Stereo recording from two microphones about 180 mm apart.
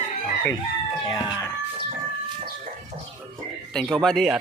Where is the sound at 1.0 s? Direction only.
25° left (ahead or behind).